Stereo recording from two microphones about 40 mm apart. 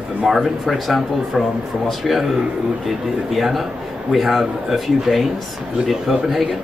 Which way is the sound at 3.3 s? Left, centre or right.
Centre.